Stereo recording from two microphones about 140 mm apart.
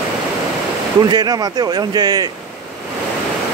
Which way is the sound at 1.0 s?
30° right (ahead or behind).